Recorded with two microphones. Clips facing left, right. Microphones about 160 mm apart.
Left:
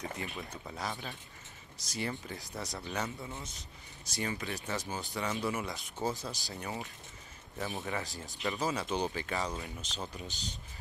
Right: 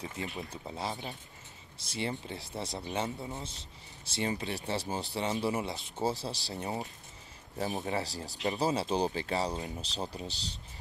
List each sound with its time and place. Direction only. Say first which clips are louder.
0.2 s a man's voice: right 2 dB; 25° right (ahead or behind)